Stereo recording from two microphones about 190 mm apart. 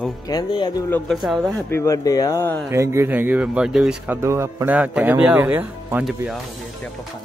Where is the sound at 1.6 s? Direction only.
15° left (ahead or behind).